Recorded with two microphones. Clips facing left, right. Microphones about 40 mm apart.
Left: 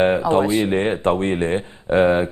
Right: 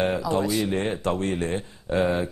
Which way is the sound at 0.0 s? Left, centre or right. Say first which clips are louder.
Left 7 dB; left.